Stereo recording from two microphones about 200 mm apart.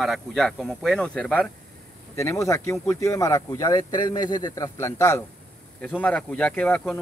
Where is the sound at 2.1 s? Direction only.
15° left (ahead or behind).